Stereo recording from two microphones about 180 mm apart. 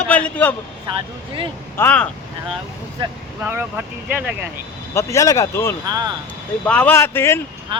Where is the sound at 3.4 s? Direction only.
10° right (ahead or behind).